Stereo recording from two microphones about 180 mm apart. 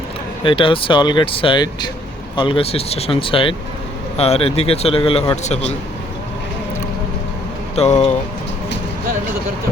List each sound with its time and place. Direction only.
0.4 s a man's voice: 30° left (ahead or behind)
7.8 s a man's voice: 35° left (ahead or behind)